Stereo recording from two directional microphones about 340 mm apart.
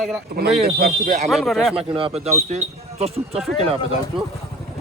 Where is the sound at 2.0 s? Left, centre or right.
Centre.